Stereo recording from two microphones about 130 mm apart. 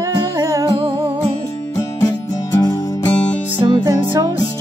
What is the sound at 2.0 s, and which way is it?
Music, 25° left (ahead or behind).